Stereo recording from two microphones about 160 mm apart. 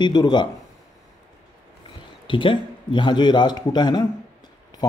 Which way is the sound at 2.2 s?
30° left (ahead or behind).